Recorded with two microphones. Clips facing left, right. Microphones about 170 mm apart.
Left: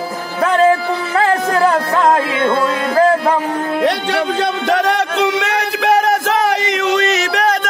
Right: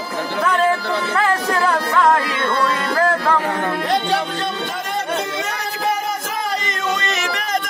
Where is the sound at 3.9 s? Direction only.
75° left (ahead or behind).